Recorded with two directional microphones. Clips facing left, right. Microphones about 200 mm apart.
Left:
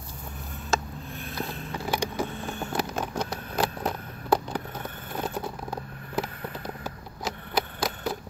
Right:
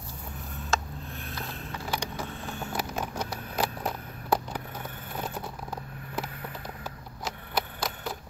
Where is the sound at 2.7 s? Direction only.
10° right (ahead or behind).